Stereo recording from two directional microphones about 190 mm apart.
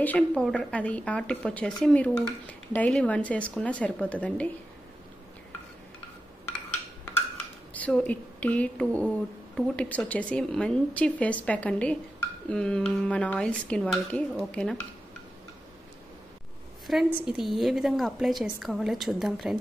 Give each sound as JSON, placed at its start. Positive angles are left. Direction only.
{"t": 0.0, "sound": "a woman's voice", "side_deg": 5}
{"t": 7.7, "sound": "a woman's voice", "side_deg": 5}
{"t": 16.8, "sound": "a woman's voice", "side_deg": 0}